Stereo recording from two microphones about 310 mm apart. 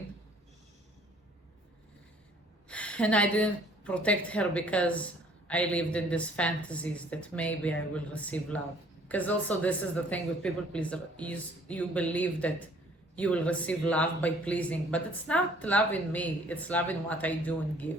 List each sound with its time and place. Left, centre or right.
2.6 s a woman's voice: centre